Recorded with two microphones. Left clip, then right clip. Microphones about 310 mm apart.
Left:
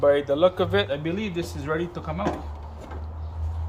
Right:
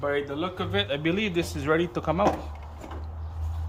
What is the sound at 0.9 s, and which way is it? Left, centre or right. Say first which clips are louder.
Speech: right 2 dB; centre.